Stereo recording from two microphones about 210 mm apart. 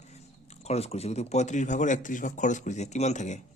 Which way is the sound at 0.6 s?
30° left (ahead or behind).